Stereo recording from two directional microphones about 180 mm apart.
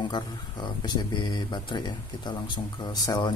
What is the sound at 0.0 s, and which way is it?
Speech, 25° left (ahead or behind).